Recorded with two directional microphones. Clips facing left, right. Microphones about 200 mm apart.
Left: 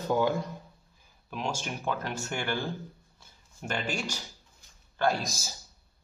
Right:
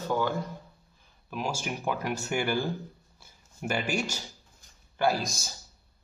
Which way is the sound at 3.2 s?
10° right (ahead or behind).